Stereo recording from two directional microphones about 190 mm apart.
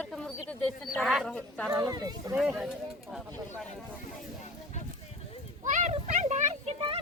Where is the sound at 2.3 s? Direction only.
5° right (ahead or behind).